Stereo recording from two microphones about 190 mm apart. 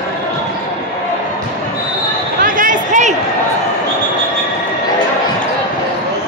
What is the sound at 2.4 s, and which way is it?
Basketball bounce, 45° right (ahead or behind).